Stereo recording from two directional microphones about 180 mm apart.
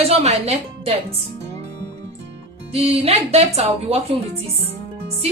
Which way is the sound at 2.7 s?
35° right (ahead or behind).